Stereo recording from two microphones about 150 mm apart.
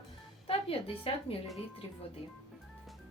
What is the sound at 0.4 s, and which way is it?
Speech, 40° left (ahead or behind).